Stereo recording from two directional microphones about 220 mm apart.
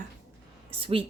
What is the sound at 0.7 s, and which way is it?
Speech, 25° right (ahead or behind).